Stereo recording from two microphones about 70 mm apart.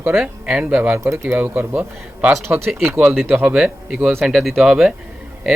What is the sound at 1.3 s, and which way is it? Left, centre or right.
A man's voice, right.